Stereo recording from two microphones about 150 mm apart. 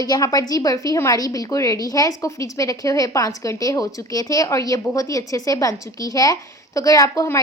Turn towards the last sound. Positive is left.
turn(degrees=20)  # may be behind; listen again after turning